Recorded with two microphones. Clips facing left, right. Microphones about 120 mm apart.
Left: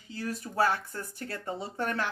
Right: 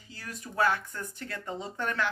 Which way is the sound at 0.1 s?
30° left (ahead or behind).